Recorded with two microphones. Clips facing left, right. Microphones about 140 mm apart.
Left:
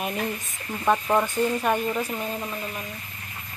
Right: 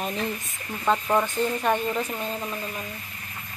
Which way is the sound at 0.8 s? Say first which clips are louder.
Left 1 dB; 5° left (ahead or behind).